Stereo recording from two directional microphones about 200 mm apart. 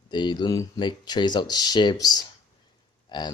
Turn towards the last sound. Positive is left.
turn(degrees=20)  # may be behind; listen again after turning